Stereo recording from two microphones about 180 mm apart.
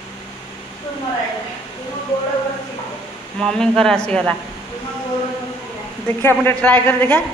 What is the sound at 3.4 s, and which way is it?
Speech, 5° left (ahead or behind).